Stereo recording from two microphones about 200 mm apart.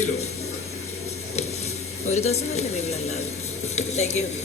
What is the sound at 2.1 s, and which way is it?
Speech, 35° left (ahead or behind).